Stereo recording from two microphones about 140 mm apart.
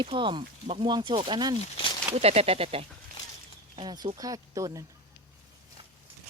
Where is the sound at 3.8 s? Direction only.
30° right (ahead or behind).